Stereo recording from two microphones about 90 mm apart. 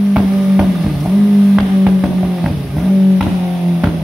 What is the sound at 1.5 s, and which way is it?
Music, 10° right (ahead or behind).